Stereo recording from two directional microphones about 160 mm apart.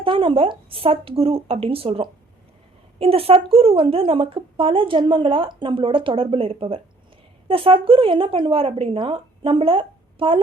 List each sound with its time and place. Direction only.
0.0 s a woman's voice: 35° right (ahead or behind)